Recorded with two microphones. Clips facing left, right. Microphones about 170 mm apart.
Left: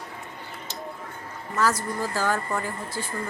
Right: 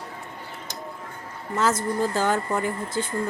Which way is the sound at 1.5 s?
20° right (ahead or behind).